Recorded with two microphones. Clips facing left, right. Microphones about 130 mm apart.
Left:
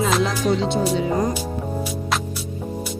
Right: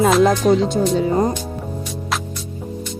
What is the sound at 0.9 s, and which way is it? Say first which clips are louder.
Speech: right 4 dB; 30° right (ahead or behind).